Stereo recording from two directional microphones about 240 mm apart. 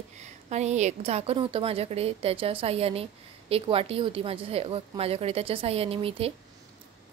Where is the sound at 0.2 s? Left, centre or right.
Right.